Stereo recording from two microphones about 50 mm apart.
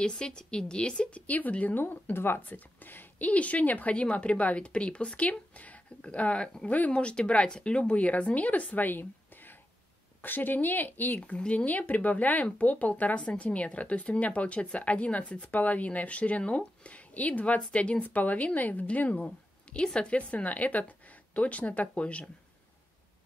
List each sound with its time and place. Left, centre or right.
0.0 s speech: centre
1.2 s speech: left
1.8 s speech: left
3.3 s speech: left
10.2 s speech: left
11.1 s speech: left
19.2 s speech: centre